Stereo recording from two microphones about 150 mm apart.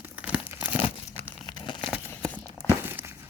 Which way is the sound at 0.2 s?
10° right (ahead or behind).